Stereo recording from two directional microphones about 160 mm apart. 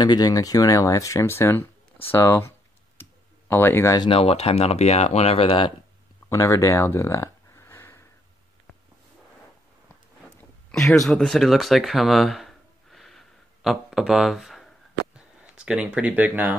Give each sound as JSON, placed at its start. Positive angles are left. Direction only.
{"t": 0.0, "sound": "speech", "side_deg": 25}
{"t": 3.0, "sound": "clicking", "side_deg": 10}
{"t": 4.0, "sound": "speech", "side_deg": 35}
{"t": 6.2, "sound": "a sound", "side_deg": 20}
{"t": 10.7, "sound": "speech", "side_deg": 0}